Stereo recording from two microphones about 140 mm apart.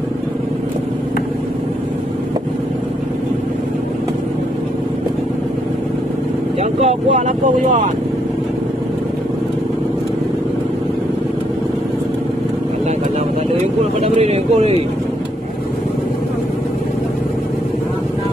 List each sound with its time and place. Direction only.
6.6 s speech: 50° right (ahead or behind); by 7.8 s 65° right (ahead or behind)
14.0 s speech: 50° right (ahead or behind)